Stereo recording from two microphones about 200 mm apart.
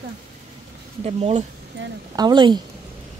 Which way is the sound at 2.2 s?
20° right (ahead or behind).